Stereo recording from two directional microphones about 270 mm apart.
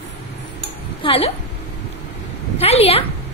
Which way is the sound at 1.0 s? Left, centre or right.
Left.